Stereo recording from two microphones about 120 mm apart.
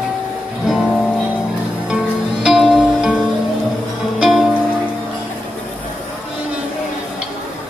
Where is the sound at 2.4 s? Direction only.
Centre (ahead or behind).